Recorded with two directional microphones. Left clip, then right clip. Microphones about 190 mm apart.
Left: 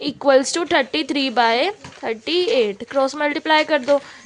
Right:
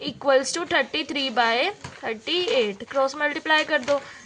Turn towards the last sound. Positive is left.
turn(degrees=45)  # may be behind; listen again after turning